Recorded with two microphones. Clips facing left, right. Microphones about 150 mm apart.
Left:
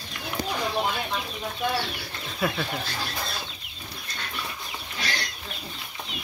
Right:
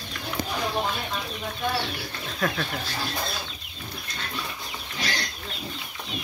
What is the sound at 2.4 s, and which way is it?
Speech, 10° left (ahead or behind).